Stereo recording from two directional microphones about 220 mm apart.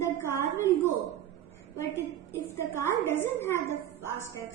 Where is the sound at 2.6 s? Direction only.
10° left (ahead or behind).